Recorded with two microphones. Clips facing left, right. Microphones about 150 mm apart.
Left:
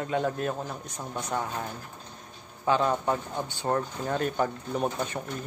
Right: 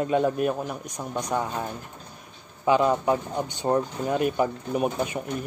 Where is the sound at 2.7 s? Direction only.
15° right (ahead or behind).